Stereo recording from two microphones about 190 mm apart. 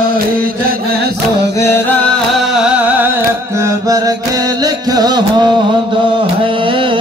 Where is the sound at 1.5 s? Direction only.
15° left (ahead or behind).